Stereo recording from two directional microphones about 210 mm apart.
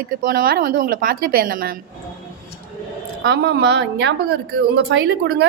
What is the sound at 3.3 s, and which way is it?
A woman's voice, 50° right (ahead or behind).